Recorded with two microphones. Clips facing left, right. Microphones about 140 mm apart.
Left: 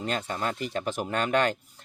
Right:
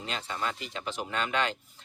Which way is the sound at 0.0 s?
50° left (ahead or behind).